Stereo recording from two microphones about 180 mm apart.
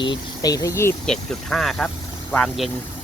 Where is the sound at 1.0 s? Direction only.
5° left (ahead or behind).